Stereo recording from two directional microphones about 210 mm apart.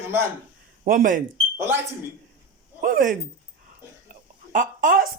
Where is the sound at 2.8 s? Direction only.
40° right (ahead or behind).